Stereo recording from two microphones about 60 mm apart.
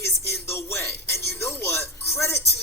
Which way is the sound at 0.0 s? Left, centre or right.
Left.